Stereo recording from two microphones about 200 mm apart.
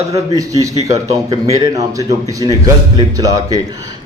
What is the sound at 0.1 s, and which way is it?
A man's voice, 15° right (ahead or behind).